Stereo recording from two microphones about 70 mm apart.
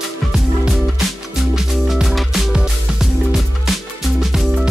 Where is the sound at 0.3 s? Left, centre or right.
Centre.